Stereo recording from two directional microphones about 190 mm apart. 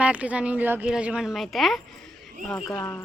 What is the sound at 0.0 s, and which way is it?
A woman's voice, 5° right (ahead or behind).